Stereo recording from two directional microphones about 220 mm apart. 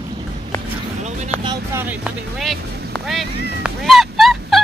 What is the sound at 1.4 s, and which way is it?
Vehicle, 20° right (ahead or behind).